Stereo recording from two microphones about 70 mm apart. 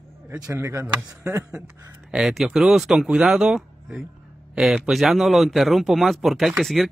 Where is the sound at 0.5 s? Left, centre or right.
Right.